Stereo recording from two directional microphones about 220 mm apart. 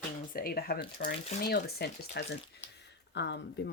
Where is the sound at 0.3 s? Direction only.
45° left (ahead or behind).